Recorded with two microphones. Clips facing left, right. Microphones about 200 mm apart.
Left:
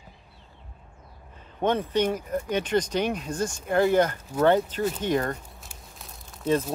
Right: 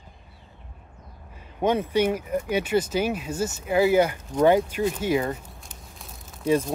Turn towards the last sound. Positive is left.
turn(degrees=0)  # may be behind; listen again after turning